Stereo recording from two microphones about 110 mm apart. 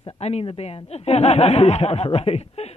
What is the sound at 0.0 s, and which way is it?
Speech, 70° left (ahead or behind).